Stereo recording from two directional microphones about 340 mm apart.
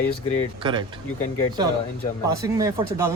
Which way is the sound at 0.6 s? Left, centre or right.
Centre.